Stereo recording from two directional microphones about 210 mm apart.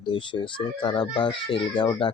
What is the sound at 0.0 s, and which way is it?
Speech, 25° left (ahead or behind).